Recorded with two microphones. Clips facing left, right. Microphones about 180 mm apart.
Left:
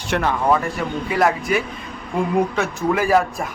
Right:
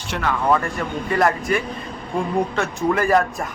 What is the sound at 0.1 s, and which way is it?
Speech, 65° left (ahead or behind).